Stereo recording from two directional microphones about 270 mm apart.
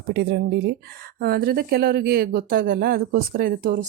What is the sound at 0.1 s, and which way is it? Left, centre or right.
Speech, right.